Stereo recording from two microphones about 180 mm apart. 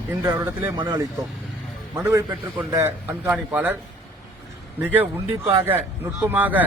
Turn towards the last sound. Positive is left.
turn(degrees=-10)  # may be behind; listen again after turning